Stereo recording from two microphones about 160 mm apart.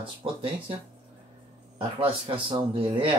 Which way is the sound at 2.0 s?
35° right (ahead or behind).